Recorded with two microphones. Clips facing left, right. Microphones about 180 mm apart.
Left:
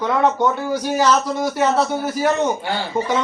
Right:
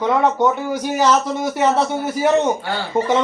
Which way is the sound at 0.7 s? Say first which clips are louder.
Even; 20° right (ahead or behind).